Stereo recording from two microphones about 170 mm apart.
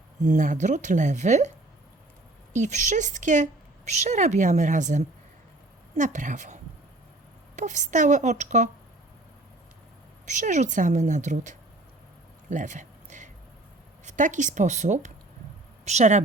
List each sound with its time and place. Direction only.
0.3 s a woman's voice: 50° right (ahead or behind)
2.5 s a woman's voice: 45° right (ahead or behind)
10.2 s a woman's voice: 45° right (ahead or behind)
12.5 s a sound: 45° right (ahead or behind)
14.0 s a woman's voice: 45° right (ahead or behind)